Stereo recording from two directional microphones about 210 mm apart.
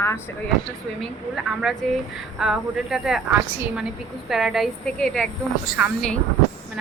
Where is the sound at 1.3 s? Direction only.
Centre (ahead or behind).